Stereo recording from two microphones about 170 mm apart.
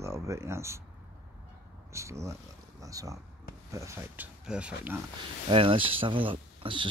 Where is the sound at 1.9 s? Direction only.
15° right (ahead or behind).